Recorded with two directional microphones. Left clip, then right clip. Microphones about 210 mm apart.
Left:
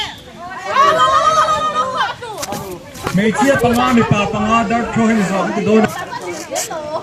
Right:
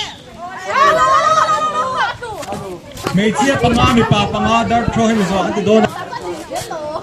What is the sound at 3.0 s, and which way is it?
A man's voice, 50° right (ahead or behind).